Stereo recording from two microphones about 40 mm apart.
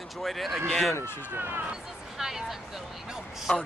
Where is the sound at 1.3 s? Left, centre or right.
Right.